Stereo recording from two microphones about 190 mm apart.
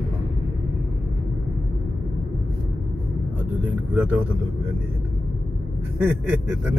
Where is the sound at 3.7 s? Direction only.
5° right (ahead or behind).